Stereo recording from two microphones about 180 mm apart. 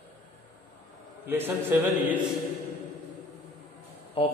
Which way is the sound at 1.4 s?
10° right (ahead or behind).